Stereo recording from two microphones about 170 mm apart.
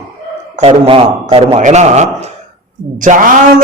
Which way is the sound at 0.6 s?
35° right (ahead or behind).